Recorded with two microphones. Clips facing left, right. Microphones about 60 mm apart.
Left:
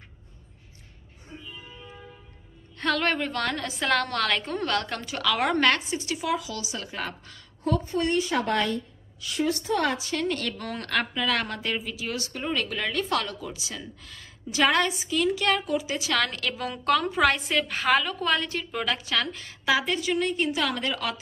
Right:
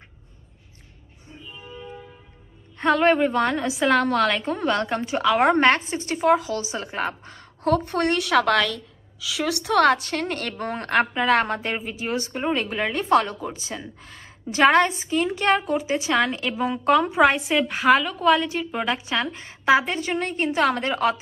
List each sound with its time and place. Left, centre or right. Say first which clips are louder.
2.8 s a woman's voice: right 7 dB; centre
7.6 s a woman's voice: right 5 dB; right
10.5 s a woman's voice: right 6 dB; right